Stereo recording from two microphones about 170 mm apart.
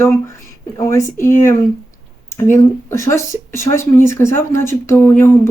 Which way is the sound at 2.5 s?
15° left (ahead or behind).